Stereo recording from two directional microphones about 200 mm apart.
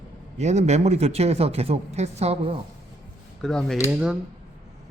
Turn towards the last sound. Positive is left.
turn(degrees=-5)  # may be behind; listen again after turning